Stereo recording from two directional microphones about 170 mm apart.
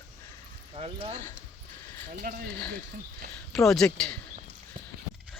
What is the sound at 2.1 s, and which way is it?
Speech, 55° right (ahead or behind).